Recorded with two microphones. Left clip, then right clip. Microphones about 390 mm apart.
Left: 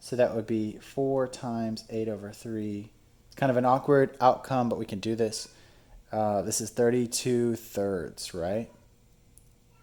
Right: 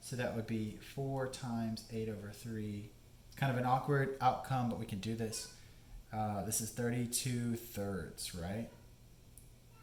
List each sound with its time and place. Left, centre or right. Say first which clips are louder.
0.0 s speech: left 14 dB; left